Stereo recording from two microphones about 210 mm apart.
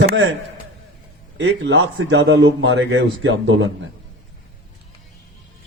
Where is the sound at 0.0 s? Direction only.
50° right (ahead or behind).